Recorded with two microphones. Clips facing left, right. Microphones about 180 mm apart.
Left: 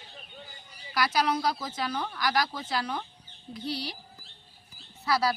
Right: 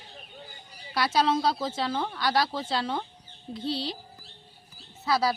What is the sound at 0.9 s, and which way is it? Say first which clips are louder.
Speech: right 2 dB; 25° right (ahead or behind).